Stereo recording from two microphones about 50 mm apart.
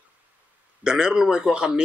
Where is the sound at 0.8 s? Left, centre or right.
Centre.